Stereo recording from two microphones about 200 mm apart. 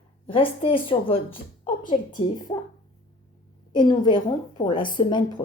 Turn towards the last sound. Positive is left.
turn(degrees=25)  # may be behind; listen again after turning